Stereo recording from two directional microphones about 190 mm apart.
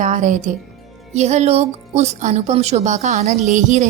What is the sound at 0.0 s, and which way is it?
A woman's voice, 40° right (ahead or behind).